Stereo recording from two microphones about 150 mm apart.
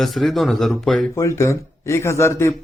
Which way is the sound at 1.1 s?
20° left (ahead or behind).